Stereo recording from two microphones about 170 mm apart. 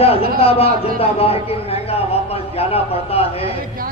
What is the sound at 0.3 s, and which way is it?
A man's voice, 35° left (ahead or behind).